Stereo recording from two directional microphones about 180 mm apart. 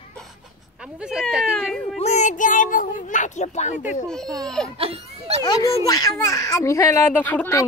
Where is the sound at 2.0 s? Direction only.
40° left (ahead or behind).